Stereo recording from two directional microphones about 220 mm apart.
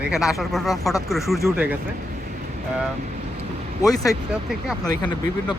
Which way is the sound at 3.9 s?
15° left (ahead or behind).